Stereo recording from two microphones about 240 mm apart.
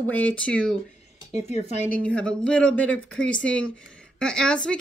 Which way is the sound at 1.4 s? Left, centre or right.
Left.